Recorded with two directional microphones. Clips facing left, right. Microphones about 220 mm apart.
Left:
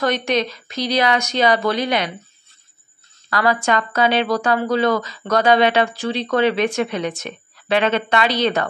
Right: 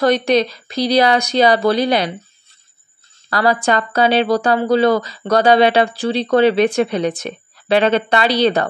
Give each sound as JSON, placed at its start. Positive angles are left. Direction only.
{"t": 0.0, "sound": "speech", "side_deg": -35}
{"t": 3.3, "sound": "speech", "side_deg": -35}